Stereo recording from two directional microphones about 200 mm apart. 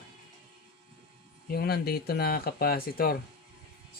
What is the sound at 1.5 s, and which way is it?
Speech, 50° left (ahead or behind).